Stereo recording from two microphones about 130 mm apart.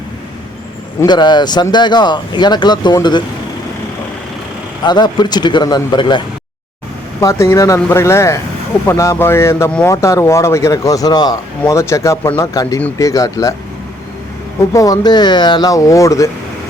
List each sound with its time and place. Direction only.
1.0 s speech: 35° left (ahead or behind)
4.8 s speech: 35° left (ahead or behind)
7.2 s speech: 20° left (ahead or behind)
14.7 s speech: 25° left (ahead or behind)